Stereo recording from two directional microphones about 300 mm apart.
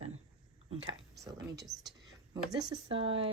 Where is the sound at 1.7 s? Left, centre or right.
Centre.